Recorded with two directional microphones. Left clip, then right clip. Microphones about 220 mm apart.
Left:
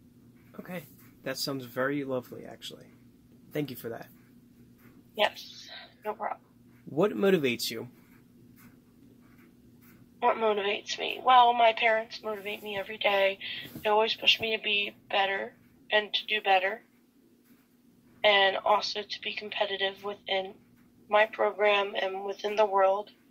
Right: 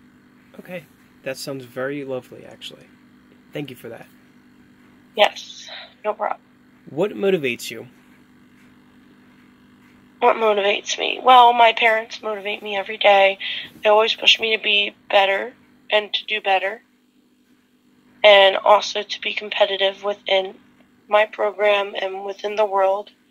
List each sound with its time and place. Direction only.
0.7 s speech: 20° right (ahead or behind)
3.5 s a man's voice: 15° right (ahead or behind)
5.1 s speech: 55° right (ahead or behind)
7.0 s a man's voice: 20° right (ahead or behind)
10.1 s a woman's voice: 50° right (ahead or behind)
18.2 s a woman's voice: 55° right (ahead or behind)